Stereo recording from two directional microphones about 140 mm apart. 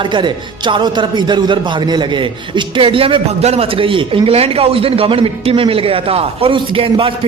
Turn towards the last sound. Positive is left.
turn(degrees=-40)  # may be behind; listen again after turning